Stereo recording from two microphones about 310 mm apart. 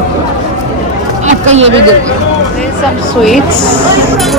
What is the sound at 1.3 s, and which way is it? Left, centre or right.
Speech, right.